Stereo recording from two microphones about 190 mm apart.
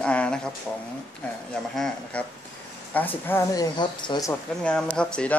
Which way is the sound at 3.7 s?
25° left (ahead or behind).